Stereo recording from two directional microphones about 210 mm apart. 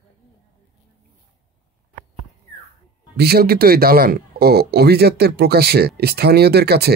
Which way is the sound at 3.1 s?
50° right (ahead or behind).